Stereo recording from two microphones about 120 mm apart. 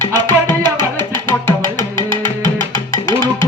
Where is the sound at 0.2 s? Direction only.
40° right (ahead or behind).